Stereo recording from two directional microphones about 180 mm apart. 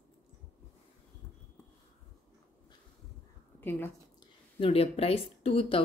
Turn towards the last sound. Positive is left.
turn(degrees=30)  # may be behind; listen again after turning